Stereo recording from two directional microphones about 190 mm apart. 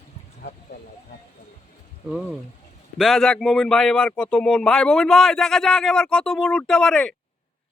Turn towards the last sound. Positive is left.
turn(degrees=5)  # may be behind; listen again after turning